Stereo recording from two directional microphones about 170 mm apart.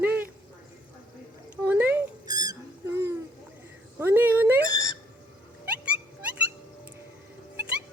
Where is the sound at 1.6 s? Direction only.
10° right (ahead or behind).